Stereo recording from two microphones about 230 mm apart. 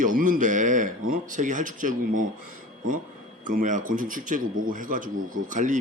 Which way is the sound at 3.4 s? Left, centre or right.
Right.